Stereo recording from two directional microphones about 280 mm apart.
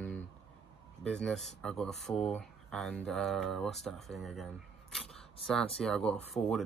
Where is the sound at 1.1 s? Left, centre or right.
Centre.